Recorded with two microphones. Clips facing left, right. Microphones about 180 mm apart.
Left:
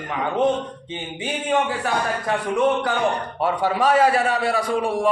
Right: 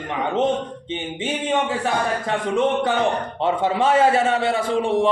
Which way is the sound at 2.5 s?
20° right (ahead or behind).